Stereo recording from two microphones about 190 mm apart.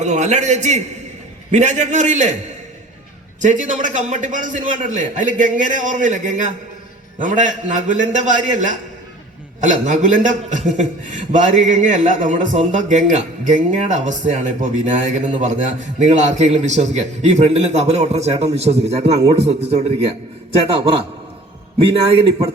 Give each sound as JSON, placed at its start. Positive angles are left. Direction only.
{"t": 0.0, "sound": "a man's voice", "side_deg": -40}
{"t": 3.4, "sound": "a man's voice", "side_deg": -40}